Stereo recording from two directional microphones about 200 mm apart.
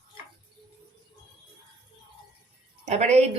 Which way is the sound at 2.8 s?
35° right (ahead or behind).